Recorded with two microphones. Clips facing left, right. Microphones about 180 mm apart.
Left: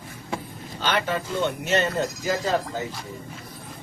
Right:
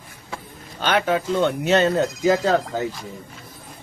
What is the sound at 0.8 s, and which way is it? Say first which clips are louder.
Speech: right 5 dB; 55° right (ahead or behind).